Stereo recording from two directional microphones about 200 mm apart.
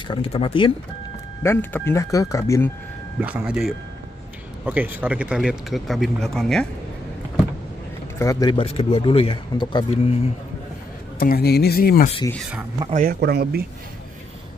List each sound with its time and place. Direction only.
0.1 s speech: 30° left (ahead or behind)
1.4 s speech: 10° left (ahead or behind)
3.2 s speech: 5° right (ahead or behind)
8.2 s speech: 15° left (ahead or behind)
11.1 s speech: 50° left (ahead or behind)
12.3 s speech: centre (ahead or behind)
12.9 s a man's voice: 45° right (ahead or behind)